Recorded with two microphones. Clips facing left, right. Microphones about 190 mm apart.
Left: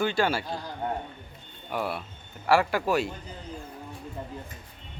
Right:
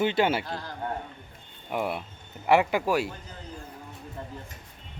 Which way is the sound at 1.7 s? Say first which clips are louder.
Right 1 dB; 20° right (ahead or behind).